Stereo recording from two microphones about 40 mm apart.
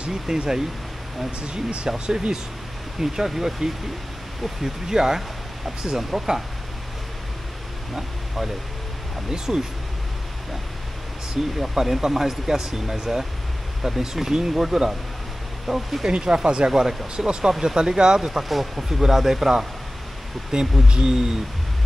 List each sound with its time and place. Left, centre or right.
0.1 s speech: centre
1.4 s speech: right; by 6.4 s centre
9.3 s speech: centre
11.5 s speech: centre
16.1 s speech: right
16.7 s speech: centre
18.4 s speech: centre
20.5 s speech: centre